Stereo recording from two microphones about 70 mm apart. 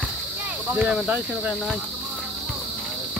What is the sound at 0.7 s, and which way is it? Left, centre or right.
Speech, centre.